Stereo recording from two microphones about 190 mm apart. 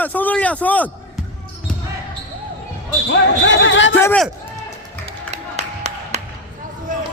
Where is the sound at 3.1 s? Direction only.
75° left (ahead or behind).